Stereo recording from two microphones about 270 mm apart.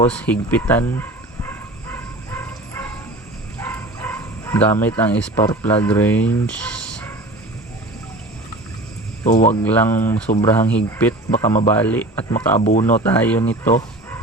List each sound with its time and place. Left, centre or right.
0.1 s speech: centre
1.5 s bow-wow: centre
3.6 s a sound: centre
9.2 s speech: left
9.6 s speech: centre
12.5 s speech: left
13.0 s speech: centre